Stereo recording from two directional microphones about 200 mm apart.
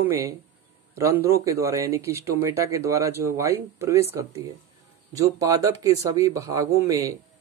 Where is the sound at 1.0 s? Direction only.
15° right (ahead or behind).